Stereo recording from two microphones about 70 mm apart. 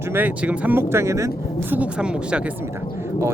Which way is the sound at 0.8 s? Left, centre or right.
Right.